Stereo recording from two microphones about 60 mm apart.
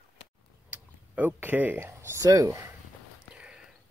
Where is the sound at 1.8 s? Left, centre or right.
Right.